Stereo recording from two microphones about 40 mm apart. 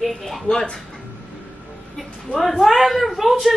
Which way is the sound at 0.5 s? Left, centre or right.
Centre.